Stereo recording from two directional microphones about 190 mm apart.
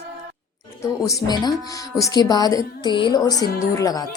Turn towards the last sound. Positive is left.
turn(degrees=15)  # may be behind; listen again after turning